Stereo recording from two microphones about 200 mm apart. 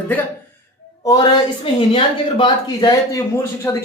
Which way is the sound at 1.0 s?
20° left (ahead or behind).